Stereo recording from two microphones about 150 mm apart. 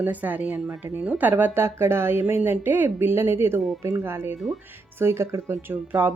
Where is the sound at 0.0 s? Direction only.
10° right (ahead or behind).